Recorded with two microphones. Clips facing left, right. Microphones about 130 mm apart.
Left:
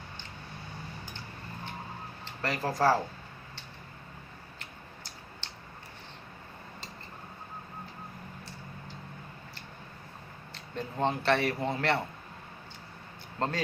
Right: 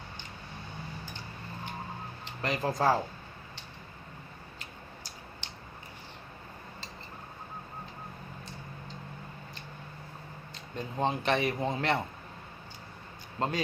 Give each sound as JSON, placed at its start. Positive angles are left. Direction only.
{"t": 2.2, "sound": "speech", "side_deg": -20}
{"t": 4.6, "sound": "a sound", "side_deg": -15}
{"t": 10.8, "sound": "speech", "side_deg": -15}
{"t": 13.4, "sound": "speech", "side_deg": -15}